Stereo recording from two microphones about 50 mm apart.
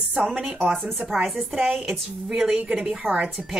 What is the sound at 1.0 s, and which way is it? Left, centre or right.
A woman's voice, centre.